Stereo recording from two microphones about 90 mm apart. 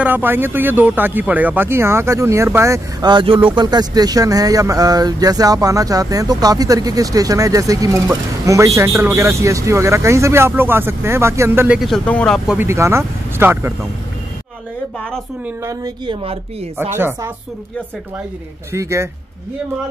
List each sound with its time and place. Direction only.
0.0 s speech: 20° right (ahead or behind)
3.0 s speech: 55° right (ahead or behind)
3.3 s speech: 70° right (ahead or behind)
3.6 s speech: 50° right (ahead or behind); by 11.6 s 30° right (ahead or behind)
12.0 s speech: 15° left (ahead or behind)
12.5 s speech: 30° right (ahead or behind)
16.1 s speech: 80° right
16.7 s speech: 25° right (ahead or behind)
18.7 s speech: 30° right (ahead or behind)